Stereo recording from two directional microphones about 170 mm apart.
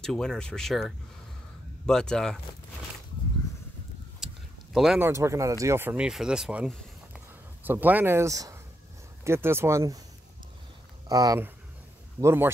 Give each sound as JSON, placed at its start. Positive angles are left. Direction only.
{"t": 0.0, "sound": "speech", "side_deg": 5}
{"t": 4.7, "sound": "speech", "side_deg": 0}
{"t": 5.0, "sound": "speech", "side_deg": -15}
{"t": 11.1, "sound": "speech", "side_deg": -20}